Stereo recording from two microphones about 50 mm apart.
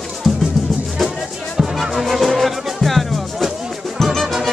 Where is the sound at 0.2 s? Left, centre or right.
Centre.